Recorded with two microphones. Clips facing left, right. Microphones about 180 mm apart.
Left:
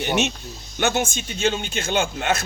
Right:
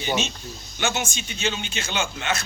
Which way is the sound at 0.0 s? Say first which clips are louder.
Left 4 dB; 65° left (ahead or behind).